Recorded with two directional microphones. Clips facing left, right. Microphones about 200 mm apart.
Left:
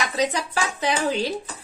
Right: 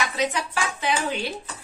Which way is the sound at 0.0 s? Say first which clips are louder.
Left 2 dB; 35° left (ahead or behind).